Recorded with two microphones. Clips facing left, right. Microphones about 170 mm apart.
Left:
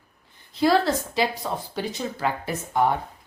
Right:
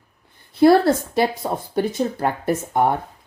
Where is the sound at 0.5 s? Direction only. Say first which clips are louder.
Right 7 dB; 55° right (ahead or behind).